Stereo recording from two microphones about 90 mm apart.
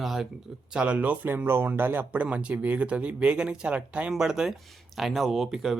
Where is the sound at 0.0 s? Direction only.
Centre (ahead or behind).